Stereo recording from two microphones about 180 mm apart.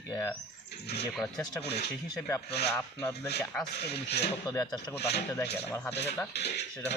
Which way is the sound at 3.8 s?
65° left (ahead or behind).